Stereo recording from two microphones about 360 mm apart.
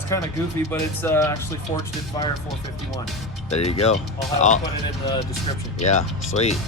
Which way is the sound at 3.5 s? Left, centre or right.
Centre.